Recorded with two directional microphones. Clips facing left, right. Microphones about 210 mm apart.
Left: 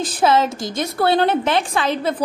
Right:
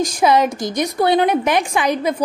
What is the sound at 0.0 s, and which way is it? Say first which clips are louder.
A woman's voice: right 2 dB; 15° right (ahead or behind).